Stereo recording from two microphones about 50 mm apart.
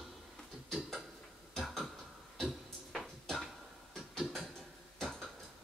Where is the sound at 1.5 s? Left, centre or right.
Centre.